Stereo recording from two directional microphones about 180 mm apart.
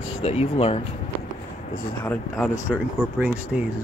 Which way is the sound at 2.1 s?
5° left (ahead or behind).